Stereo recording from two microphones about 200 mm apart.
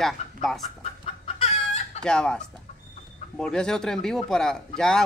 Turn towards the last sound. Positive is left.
turn(degrees=5)  # may be behind; listen again after turning